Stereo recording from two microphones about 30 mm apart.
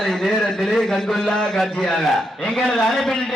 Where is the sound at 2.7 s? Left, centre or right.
Centre.